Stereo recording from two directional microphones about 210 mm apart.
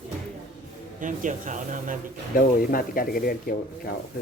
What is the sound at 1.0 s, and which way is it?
Speech, 40° right (ahead or behind).